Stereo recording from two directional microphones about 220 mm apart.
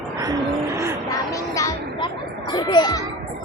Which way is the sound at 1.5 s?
15° left (ahead or behind).